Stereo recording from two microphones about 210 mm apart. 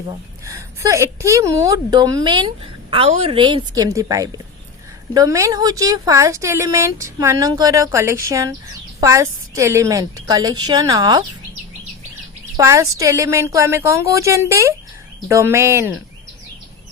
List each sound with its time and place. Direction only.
0.1 s a woman's voice: 15° right (ahead or behind)
12.5 s speech: 15° right (ahead or behind)